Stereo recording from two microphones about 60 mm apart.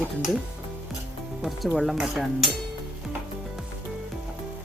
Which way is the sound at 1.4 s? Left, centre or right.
Centre.